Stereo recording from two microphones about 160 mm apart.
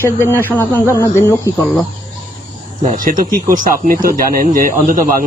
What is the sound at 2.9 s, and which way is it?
Speech, 55° right (ahead or behind).